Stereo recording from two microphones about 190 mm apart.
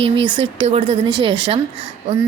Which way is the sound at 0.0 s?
25° right (ahead or behind).